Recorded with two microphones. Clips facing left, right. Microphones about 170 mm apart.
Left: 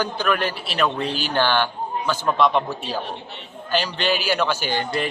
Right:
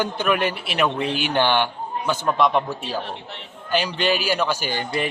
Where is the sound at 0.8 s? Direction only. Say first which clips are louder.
Right 1 dB; 5° right (ahead or behind).